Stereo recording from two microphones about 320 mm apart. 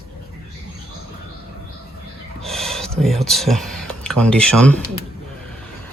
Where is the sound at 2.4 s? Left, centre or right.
Centre.